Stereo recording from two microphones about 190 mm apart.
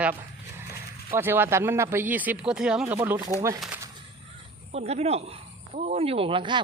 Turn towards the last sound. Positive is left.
turn(degrees=-25)  # may be behind; listen again after turning